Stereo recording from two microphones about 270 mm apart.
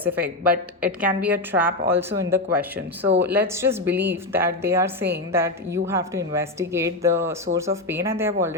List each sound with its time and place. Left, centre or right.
0.0 s a woman's voice: centre
0.5 s speech: right
1.0 s a woman's voice: centre